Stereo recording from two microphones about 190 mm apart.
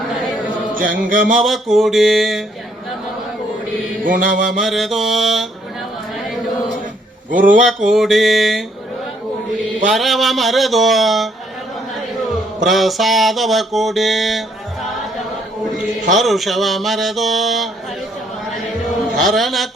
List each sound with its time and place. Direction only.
0.7 s chant: 45° right (ahead or behind)
1.4 s mantra: centre (ahead or behind)
4.0 s chant: 45° right (ahead or behind)
4.6 s mantra: centre (ahead or behind)
7.3 s chant: 45° right (ahead or behind)
7.9 s mantra: centre (ahead or behind)
9.9 s mantra: centre (ahead or behind)
12.6 s mantra: centre (ahead or behind)
16.1 s mantra: centre (ahead or behind)
19.1 s mantra: centre (ahead or behind)